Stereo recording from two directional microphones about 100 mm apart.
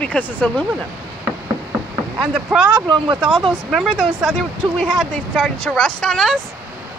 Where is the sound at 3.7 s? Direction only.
Centre (ahead or behind).